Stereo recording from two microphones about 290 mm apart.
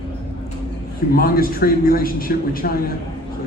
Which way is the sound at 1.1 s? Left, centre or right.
Left.